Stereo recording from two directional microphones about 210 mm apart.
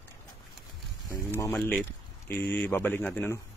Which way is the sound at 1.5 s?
Centre (ahead or behind).